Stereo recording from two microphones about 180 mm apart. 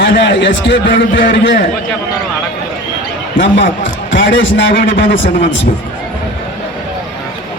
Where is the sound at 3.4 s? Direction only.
90° left.